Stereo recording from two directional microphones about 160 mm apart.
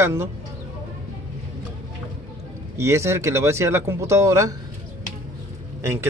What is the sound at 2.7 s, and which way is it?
Speech, 15° right (ahead or behind).